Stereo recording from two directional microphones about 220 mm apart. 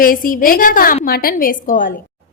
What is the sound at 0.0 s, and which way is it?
A woman's voice, 40° left (ahead or behind).